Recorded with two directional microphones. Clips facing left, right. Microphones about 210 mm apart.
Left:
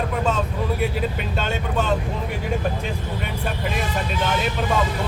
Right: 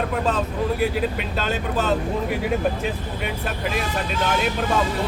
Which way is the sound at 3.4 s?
Centre (ahead or behind).